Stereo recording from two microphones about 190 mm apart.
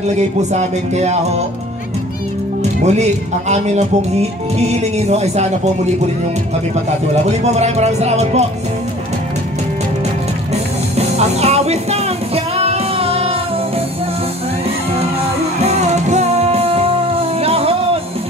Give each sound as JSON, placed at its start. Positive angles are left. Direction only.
{"t": 0.4, "sound": "speech", "side_deg": -35}
{"t": 2.6, "sound": "speech", "side_deg": -35}
{"t": 7.2, "sound": "speech", "side_deg": -35}
{"t": 10.5, "sound": "music", "side_deg": -35}
{"t": 15.6, "sound": "music", "side_deg": -35}